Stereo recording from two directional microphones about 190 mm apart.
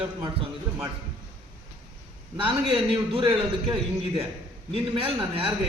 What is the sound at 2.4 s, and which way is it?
A man's voice, 30° right (ahead or behind).